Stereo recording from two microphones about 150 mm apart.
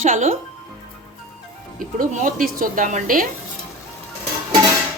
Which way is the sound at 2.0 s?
60° right (ahead or behind).